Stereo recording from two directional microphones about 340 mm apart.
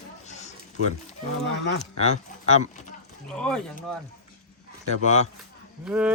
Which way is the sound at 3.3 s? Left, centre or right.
Centre.